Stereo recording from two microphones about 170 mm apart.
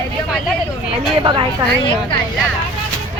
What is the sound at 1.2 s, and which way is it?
Speech, 30° right (ahead or behind).